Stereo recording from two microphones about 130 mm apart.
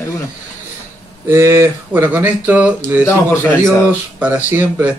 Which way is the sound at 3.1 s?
15° left (ahead or behind).